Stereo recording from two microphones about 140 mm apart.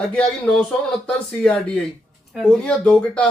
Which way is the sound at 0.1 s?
5° left (ahead or behind).